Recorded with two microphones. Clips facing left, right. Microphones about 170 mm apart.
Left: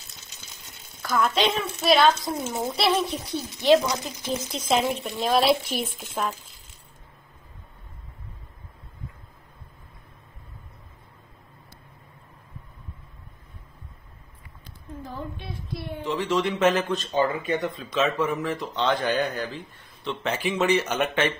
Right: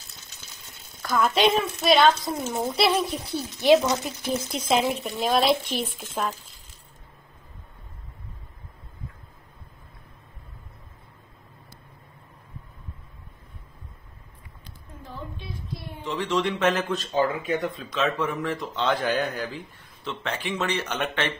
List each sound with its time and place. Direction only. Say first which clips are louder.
1.2 s a woman's voice: right 4 dB; 10° right (ahead or behind)
15.0 s a sound: left 3 dB; 65° left (ahead or behind)
16.0 s speech: left 1 dB; centre (ahead or behind)